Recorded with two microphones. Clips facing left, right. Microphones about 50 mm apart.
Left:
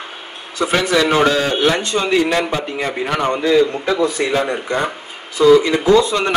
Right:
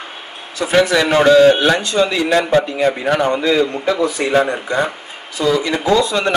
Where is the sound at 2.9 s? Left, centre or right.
Right.